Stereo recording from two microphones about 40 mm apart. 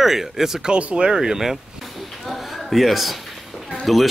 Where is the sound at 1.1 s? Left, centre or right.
Centre.